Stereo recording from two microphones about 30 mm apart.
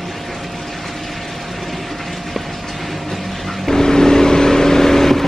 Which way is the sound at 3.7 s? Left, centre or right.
Centre.